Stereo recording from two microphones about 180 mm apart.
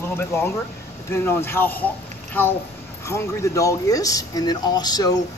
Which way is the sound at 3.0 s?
15° left (ahead or behind).